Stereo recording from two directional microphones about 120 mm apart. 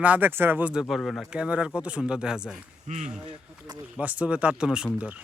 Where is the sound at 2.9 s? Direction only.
75° right (ahead or behind).